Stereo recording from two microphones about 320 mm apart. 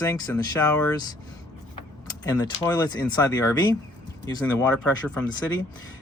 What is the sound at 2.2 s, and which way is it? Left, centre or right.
Speech, centre.